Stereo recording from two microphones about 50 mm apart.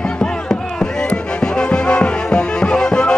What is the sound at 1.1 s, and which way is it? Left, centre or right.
Music, left.